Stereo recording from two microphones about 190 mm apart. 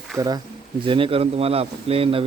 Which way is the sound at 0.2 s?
20° right (ahead or behind).